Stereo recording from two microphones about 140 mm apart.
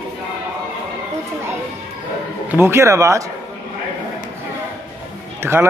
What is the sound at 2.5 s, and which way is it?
Speech, 20° right (ahead or behind).